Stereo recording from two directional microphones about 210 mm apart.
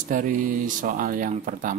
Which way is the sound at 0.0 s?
40° right (ahead or behind).